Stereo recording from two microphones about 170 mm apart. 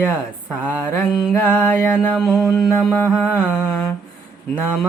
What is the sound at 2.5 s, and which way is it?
Mantra, 20° left (ahead or behind).